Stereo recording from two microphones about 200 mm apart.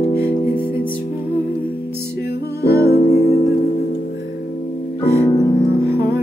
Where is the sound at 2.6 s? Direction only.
50° left (ahead or behind).